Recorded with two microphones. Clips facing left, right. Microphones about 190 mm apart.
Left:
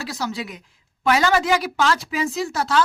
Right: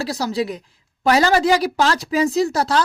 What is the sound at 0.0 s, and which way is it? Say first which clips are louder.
Speech: right 6 dB; 35° right (ahead or behind).